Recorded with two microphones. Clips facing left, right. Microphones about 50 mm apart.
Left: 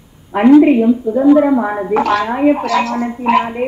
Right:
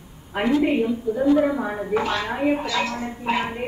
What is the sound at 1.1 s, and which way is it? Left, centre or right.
Speech, left.